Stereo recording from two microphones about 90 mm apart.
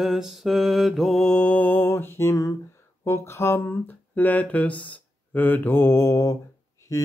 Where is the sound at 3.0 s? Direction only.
30° left (ahead or behind).